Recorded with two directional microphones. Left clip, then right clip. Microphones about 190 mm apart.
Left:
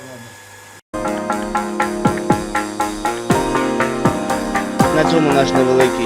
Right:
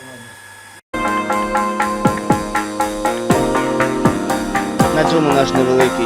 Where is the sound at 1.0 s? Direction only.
Centre (ahead or behind).